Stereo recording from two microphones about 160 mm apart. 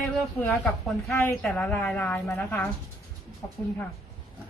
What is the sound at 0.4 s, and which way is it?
Speech, 5° left (ahead or behind).